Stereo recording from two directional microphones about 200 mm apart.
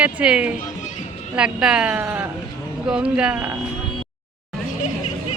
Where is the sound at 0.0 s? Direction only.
5° right (ahead or behind).